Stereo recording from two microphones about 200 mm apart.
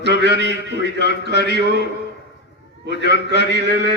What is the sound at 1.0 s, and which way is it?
Speech, 55° left (ahead or behind).